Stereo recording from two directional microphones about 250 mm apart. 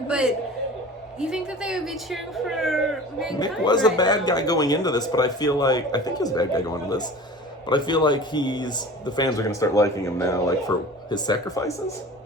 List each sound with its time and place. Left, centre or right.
0.1 s speech: centre
3.3 s speech: centre